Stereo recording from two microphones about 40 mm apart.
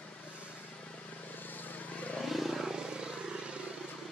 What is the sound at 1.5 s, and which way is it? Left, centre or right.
Vehicle, left.